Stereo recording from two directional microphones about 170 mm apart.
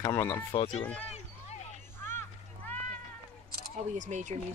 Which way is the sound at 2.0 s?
15° left (ahead or behind).